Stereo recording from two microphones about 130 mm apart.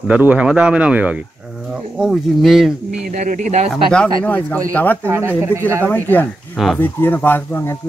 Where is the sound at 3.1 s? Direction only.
80° right.